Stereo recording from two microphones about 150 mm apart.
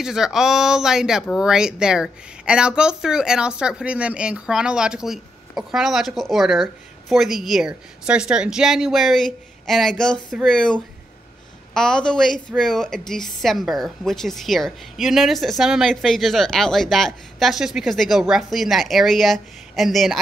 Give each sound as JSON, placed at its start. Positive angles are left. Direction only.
{"t": 0.0, "sound": "speech", "side_deg": -5}